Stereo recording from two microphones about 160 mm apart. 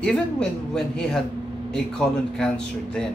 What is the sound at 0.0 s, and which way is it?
Speech, 5° left (ahead or behind).